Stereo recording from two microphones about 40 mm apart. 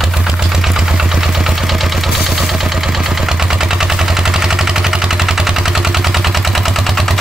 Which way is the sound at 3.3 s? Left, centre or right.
Centre.